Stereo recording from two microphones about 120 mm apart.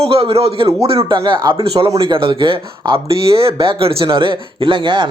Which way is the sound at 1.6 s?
55° right (ahead or behind).